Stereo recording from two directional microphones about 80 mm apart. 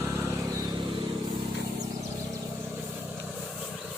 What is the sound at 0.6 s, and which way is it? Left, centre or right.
Vehicle, right.